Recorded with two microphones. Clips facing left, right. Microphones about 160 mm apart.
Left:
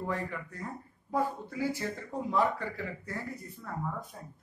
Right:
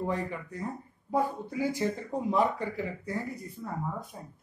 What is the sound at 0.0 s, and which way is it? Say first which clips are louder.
A man's voice: right 3 dB; 20° right (ahead or behind).